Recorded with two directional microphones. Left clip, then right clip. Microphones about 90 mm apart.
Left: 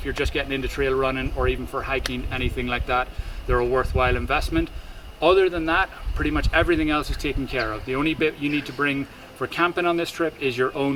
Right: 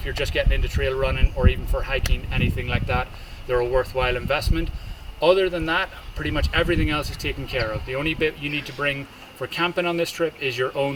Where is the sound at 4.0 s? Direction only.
25° left (ahead or behind).